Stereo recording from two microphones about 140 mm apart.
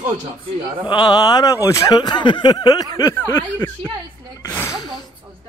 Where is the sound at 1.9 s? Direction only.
35° left (ahead or behind).